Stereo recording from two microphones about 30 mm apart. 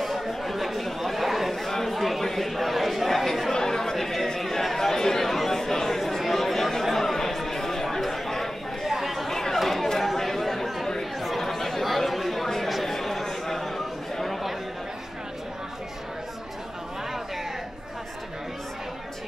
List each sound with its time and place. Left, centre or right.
0.0 s chatter: centre
2.5 s a sound: centre
3.3 s chatter: centre
3.5 s chatter: centre
8.8 s chatter: centre
9.3 s chatter: centre